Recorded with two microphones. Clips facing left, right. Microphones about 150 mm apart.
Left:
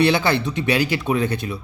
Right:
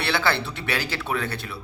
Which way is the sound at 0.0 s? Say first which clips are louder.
Left 7 dB; 15° left (ahead or behind).